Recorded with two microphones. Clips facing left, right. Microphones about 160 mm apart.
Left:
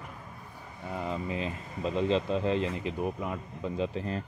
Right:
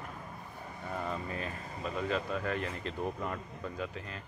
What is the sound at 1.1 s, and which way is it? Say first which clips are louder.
Speech: left 4 dB; 20° left (ahead or behind).